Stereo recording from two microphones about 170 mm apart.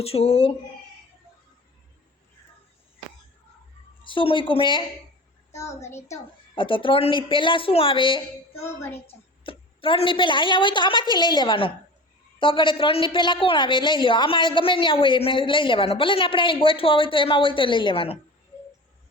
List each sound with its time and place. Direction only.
0.0 s a woman's voice: 35° left (ahead or behind)
4.0 s a woman's voice: 30° left (ahead or behind)
5.5 s a child's voice: 15° left (ahead or behind)
6.6 s a woman's voice: 30° left (ahead or behind)
8.6 s a child's voice: 15° left (ahead or behind)
9.0 s a woman's voice: 30° left (ahead or behind)